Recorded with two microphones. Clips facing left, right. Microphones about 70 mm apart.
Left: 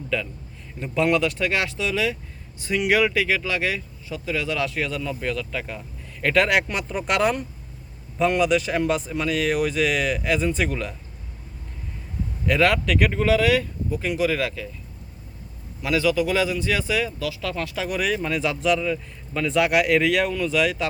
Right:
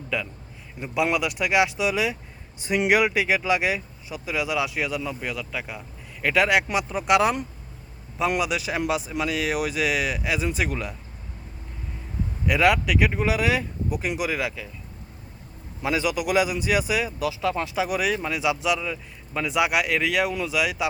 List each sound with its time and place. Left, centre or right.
0.1 s speech: centre
12.5 s speech: centre
15.8 s speech: right
17.8 s speech: centre